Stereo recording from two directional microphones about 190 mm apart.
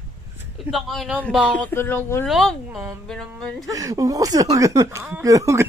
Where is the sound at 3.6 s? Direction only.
20° right (ahead or behind).